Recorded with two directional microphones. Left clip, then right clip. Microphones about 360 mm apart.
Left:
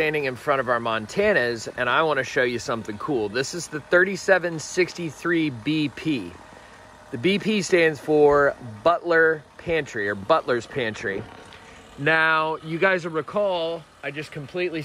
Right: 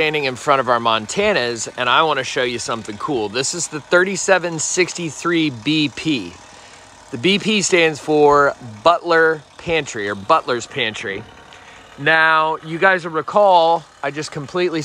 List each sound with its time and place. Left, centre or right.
0.0 s speech: centre
14.0 s speech: right
14.4 s speech: centre